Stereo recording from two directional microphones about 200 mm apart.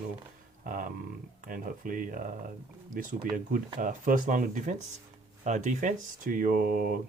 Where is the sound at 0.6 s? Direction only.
45° right (ahead or behind).